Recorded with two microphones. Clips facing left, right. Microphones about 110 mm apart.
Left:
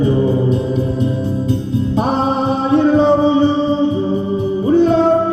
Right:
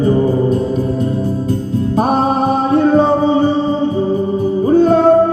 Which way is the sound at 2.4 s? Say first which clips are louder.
Left 1 dB; 40° right (ahead or behind).